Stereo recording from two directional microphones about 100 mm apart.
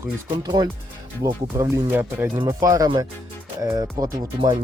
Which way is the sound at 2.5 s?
35° right (ahead or behind).